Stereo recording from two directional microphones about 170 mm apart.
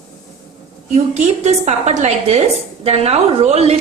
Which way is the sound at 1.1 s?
40° right (ahead or behind).